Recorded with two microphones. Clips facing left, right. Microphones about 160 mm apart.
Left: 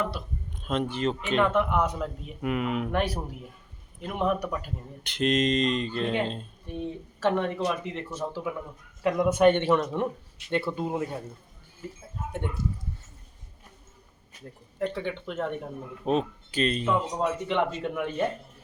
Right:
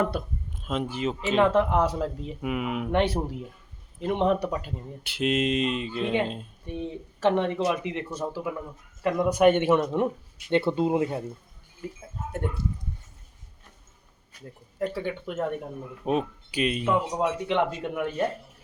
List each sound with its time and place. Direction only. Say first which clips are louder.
0.6 s speech: left 1 dB; 5° right (ahead or behind)
1.4 s speech: right 3 dB; 30° right (ahead or behind)
2.4 s speech: left 1 dB; 5° right (ahead or behind)
2.9 s speech: right 4 dB; 25° right (ahead or behind)
5.0 s speech: left 1 dB; 5° right (ahead or behind)
6.7 s speech: even; 15° right (ahead or behind)
8.2 s speech: left 1 dB; 5° right (ahead or behind)
10.5 s speech: right 5 dB; 25° right (ahead or behind)
12.3 s speech: right 2 dB; 5° right (ahead or behind)
14.8 s speech: right 1 dB; 5° right (ahead or behind)